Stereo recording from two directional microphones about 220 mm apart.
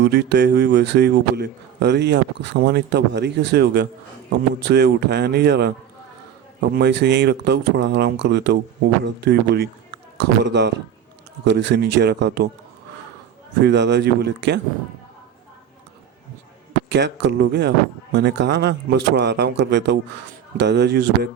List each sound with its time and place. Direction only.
0.0 s a man's voice: 50° right (ahead or behind)
13.6 s a man's voice: 50° right (ahead or behind)
16.9 s a man's voice: 50° right (ahead or behind)